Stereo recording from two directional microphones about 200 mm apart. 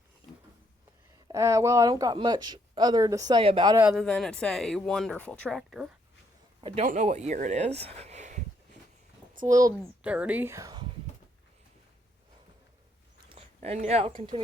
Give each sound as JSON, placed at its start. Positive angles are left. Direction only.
{"t": 1.3, "sound": "speech", "side_deg": -15}
{"t": 3.8, "sound": "speech", "side_deg": 0}
{"t": 6.6, "sound": "a man's voice", "side_deg": -25}
{"t": 6.8, "sound": "speech", "side_deg": -35}
{"t": 9.3, "sound": "a sound", "side_deg": -40}
{"t": 10.0, "sound": "speech", "side_deg": -5}
{"t": 13.6, "sound": "speech", "side_deg": -35}